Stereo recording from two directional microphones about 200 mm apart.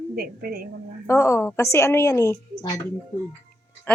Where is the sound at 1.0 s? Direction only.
15° left (ahead or behind).